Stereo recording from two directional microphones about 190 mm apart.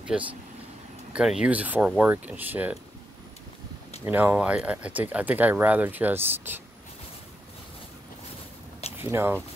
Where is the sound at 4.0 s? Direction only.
10° right (ahead or behind).